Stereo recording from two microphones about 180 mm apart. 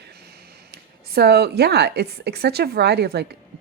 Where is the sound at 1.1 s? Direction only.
65° right (ahead or behind).